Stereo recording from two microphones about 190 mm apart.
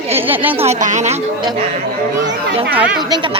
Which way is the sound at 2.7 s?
5° right (ahead or behind).